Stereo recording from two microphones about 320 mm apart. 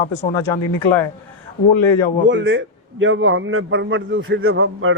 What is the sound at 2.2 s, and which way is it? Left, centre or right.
A man's voice, right.